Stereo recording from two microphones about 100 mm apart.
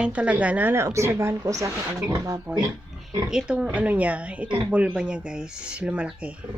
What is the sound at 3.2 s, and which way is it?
Speech, 10° right (ahead or behind).